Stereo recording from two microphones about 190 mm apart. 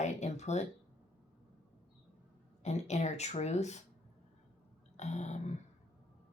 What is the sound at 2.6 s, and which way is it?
Speech, 35° left (ahead or behind).